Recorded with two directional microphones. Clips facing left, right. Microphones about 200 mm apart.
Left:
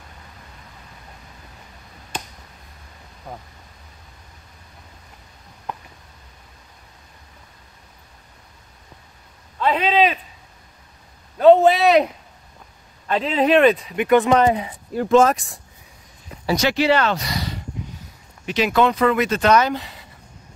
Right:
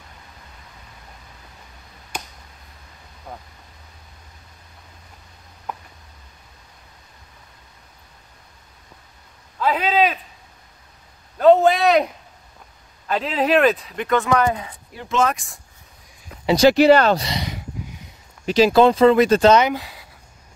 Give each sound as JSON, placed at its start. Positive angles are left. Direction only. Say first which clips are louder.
{"t": 2.1, "sound": "a sound", "louder": "left 1 dB", "side_deg": -10}
{"t": 3.3, "sound": "speech", "louder": "left 1 dB", "side_deg": 0}
{"t": 9.6, "sound": "a man's voice", "louder": "left 1 dB", "side_deg": -5}
{"t": 11.3, "sound": "a sound", "louder": "left 1 dB", "side_deg": 0}
{"t": 13.0, "sound": "speech", "louder": "left 2 dB", "side_deg": 0}
{"t": 14.0, "sound": "speech", "louder": "left 4 dB", "side_deg": 15}
{"t": 15.0, "sound": "speech", "louder": "left 6 dB", "side_deg": 40}
{"t": 16.4, "sound": "speech", "louder": "right 6 dB", "side_deg": -30}
{"t": 16.7, "sound": "speech", "louder": "right 5 dB", "side_deg": -45}
{"t": 17.3, "sound": "a sound", "louder": "even", "side_deg": -15}
{"t": 18.4, "sound": "speech", "louder": "right 5 dB", "side_deg": -35}
{"t": 19.6, "sound": "speech", "louder": "right 1 dB", "side_deg": -5}